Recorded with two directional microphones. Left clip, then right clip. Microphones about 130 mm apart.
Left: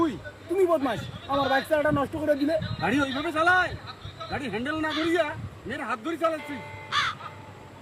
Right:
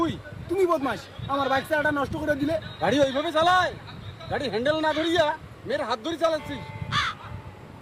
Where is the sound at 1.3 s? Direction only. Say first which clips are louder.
Even; 40° right (ahead or behind).